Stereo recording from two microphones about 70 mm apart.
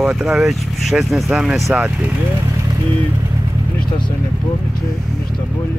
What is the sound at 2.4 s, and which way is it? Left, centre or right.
Vehicle, right.